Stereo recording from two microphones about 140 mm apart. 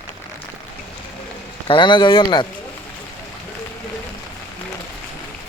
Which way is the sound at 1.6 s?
35° left (ahead or behind).